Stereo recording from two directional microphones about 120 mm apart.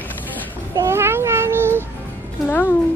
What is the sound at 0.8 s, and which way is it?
Speech, 20° right (ahead or behind).